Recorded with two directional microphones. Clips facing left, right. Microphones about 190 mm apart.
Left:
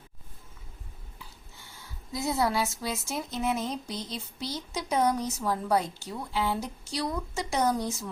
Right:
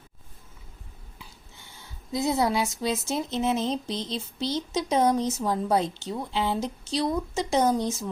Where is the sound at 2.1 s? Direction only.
20° right (ahead or behind).